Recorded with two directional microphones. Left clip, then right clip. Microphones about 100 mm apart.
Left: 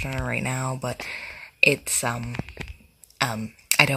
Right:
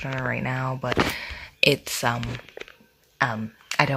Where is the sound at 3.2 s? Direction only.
25° left (ahead or behind).